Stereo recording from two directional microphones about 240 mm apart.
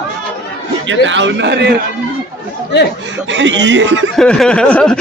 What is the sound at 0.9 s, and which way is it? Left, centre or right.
Speech, right.